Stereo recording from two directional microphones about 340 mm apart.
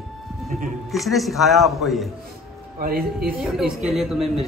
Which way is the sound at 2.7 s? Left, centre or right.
Right.